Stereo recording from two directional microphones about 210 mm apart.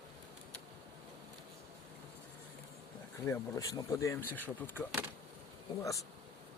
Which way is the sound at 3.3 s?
15° left (ahead or behind).